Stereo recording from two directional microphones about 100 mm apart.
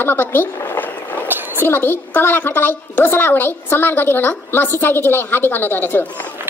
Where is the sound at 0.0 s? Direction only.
20° left (ahead or behind).